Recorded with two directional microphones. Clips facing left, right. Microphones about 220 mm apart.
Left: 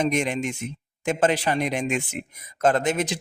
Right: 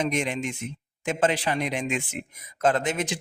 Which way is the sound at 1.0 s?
45° left (ahead or behind).